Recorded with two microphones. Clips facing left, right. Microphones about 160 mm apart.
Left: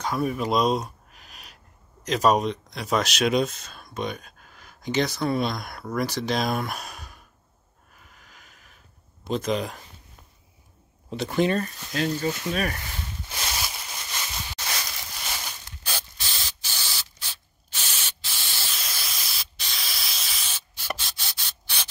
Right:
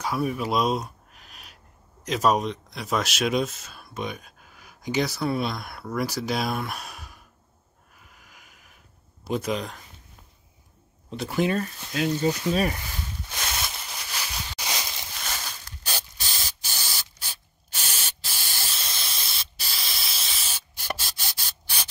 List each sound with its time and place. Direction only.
0.0 s a sound: 5° right (ahead or behind)
2.0 s speech: centre (ahead or behind)
8.2 s a sound: 10° right (ahead or behind)
9.3 s speech: 5° right (ahead or behind)
11.2 s speech: 5° right (ahead or behind)
12.2 s speech: 20° right (ahead or behind)
13.4 s a sound: 5° left (ahead or behind); by 15.0 s 20° right (ahead or behind)
15.1 s crushing: 10° left (ahead or behind)
15.8 s spray: 40° right (ahead or behind)
18.7 s hiss: centre (ahead or behind)
19.0 s spray: centre (ahead or behind)
20.4 s spray: 40° right (ahead or behind)